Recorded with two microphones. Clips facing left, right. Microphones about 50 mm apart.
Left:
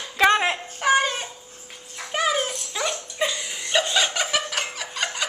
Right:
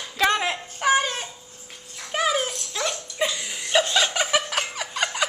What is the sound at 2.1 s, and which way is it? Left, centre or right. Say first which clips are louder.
Dog: even; centre.